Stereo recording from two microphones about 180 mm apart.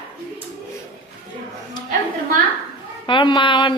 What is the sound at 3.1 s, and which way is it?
Speech, 25° left (ahead or behind).